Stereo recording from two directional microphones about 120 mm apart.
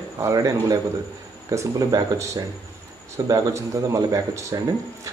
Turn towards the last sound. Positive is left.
turn(degrees=-30)  # may be behind; listen again after turning